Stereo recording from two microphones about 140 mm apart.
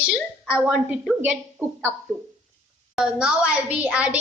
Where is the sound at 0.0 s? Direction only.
10° right (ahead or behind).